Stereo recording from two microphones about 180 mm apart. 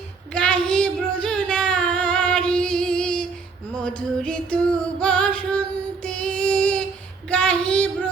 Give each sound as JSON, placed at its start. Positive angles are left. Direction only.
{"t": 0.3, "sound": "singing", "side_deg": 5}
{"t": 3.8, "sound": "music", "side_deg": 5}
{"t": 7.3, "sound": "child singing", "side_deg": 5}